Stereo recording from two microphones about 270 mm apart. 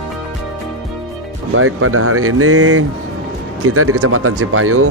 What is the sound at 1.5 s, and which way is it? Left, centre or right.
Speech, right.